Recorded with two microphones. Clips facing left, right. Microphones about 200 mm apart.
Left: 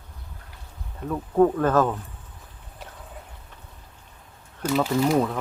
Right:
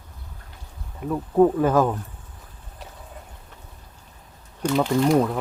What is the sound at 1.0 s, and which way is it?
Speech, 10° right (ahead or behind).